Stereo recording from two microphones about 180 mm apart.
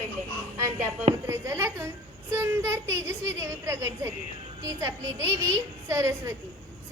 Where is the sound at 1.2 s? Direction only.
15° right (ahead or behind).